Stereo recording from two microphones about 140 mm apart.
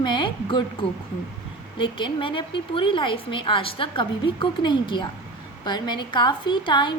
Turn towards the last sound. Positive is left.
turn(degrees=35)  # may be behind; listen again after turning